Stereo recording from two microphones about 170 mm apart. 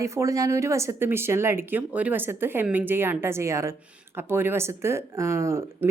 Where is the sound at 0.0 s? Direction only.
15° right (ahead or behind).